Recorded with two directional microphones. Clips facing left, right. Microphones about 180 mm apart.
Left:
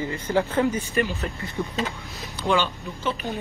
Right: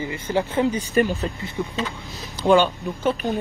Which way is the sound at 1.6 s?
5° right (ahead or behind).